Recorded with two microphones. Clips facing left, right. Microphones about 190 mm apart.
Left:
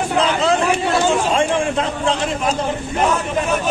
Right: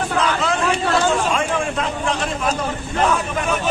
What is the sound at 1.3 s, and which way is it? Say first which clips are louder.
Speech: left 4 dB; 25° left (ahead or behind).